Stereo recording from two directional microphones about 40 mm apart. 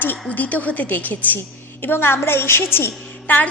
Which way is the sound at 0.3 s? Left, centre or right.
Left.